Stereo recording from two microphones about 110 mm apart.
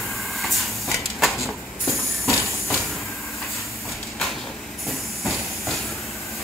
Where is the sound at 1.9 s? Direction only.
25° left (ahead or behind).